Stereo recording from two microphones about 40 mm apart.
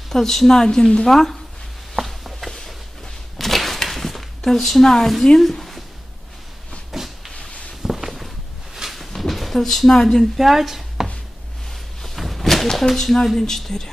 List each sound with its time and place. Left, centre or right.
0.1 s a woman's voice: centre
2.0 s a sound: centre
5.4 s speech: centre
6.9 s a sound: centre
7.8 s walk: centre
8.8 s a sound: centre
9.3 s speech: centre
10.3 s speech: centre
12.2 s speech: centre